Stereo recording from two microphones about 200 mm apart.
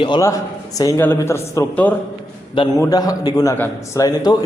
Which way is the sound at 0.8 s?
15° left (ahead or behind).